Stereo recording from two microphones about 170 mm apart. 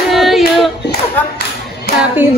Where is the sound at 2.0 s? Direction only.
10° right (ahead or behind).